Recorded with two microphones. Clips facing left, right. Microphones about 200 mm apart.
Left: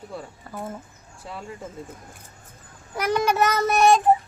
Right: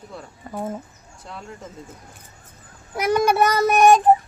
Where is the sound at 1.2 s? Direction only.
10° left (ahead or behind).